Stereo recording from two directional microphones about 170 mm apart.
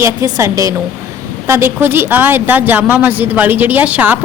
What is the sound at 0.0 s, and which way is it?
A woman's voice, 15° right (ahead or behind).